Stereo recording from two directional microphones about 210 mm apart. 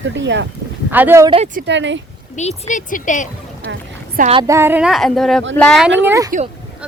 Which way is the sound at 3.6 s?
55° right (ahead or behind).